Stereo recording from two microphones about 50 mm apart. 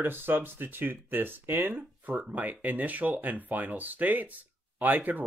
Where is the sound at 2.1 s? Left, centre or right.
Right.